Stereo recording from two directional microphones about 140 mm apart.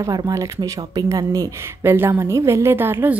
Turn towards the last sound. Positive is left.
turn(degrees=-15)  # may be behind; listen again after turning